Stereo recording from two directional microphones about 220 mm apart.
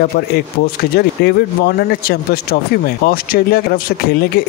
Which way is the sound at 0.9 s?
45° left (ahead or behind).